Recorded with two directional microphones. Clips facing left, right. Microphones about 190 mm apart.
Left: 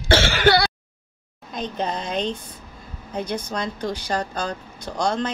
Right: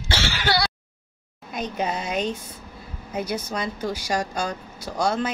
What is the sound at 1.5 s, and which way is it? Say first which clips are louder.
Speech: even; 10° right (ahead or behind).